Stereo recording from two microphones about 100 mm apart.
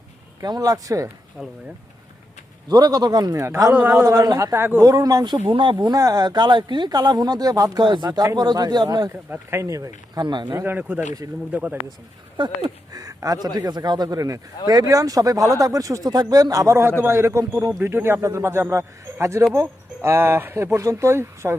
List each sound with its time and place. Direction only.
0.4 s speech: 40° right (ahead or behind)
1.4 s speech: 5° right (ahead or behind)
2.6 s speech: 40° right (ahead or behind)
3.7 s speech: 15° right (ahead or behind)
3.9 s speech: 35° right (ahead or behind)
4.9 s speech: 40° right (ahead or behind)
5.5 s speech: 55° right (ahead or behind)
5.8 s speech: 40° right (ahead or behind)
9.3 s speech: 25° right (ahead or behind)
10.2 s speech: 50° right (ahead or behind)
10.5 s a man's voice: 25° right (ahead or behind)
12.4 s speech: 55° right (ahead or behind)
12.9 s a man's voice: 35° right (ahead or behind)